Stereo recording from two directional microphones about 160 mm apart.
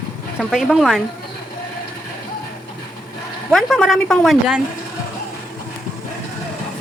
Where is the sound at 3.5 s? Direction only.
Centre (ahead or behind).